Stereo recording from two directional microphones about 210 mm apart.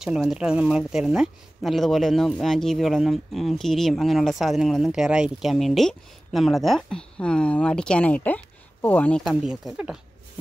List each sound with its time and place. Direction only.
0.0 s speech: centre (ahead or behind)